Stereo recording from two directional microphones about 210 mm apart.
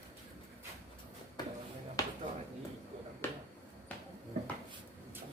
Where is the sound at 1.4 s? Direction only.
20° left (ahead or behind).